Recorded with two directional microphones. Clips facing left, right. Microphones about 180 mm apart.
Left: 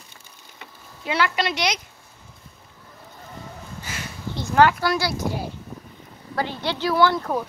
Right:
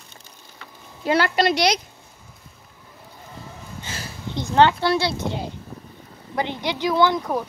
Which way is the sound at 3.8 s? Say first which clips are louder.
Even; 30° right (ahead or behind).